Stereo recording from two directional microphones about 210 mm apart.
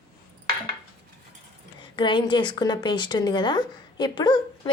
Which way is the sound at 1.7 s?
20° left (ahead or behind).